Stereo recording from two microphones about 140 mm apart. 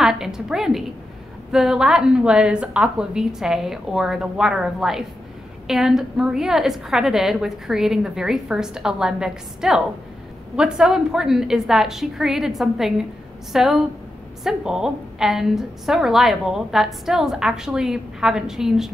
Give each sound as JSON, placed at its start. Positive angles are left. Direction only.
{"t": 0.0, "sound": "a woman's voice", "side_deg": -5}